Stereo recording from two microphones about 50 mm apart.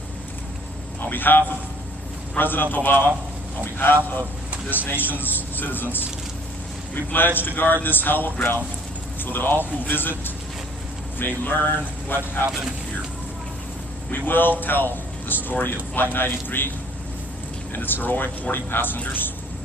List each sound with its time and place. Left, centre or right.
1.0 s speech: left
14.1 s speech: left